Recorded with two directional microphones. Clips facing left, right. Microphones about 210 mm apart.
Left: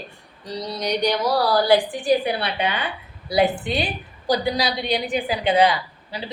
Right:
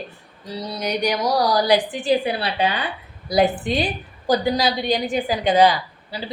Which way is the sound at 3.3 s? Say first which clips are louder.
Right 1 dB; 40° right (ahead or behind).